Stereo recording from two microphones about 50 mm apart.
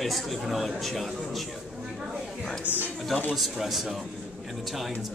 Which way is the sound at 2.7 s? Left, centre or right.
Right.